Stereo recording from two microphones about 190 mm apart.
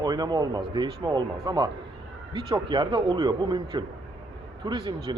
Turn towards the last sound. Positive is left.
turn(degrees=-25)  # may be behind; listen again after turning